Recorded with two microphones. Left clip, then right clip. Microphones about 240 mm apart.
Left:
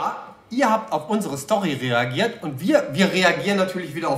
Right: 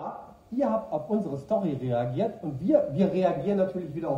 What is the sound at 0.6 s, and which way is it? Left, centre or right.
Speech, left.